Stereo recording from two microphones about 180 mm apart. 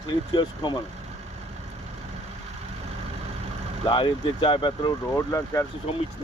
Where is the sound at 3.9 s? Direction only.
25° left (ahead or behind).